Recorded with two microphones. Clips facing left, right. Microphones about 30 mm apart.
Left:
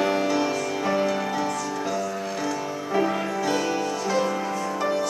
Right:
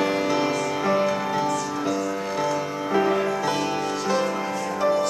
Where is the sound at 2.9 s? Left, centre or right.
Centre.